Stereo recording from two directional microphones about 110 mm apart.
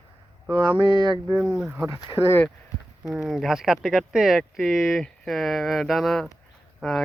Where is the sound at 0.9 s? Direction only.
40° right (ahead or behind).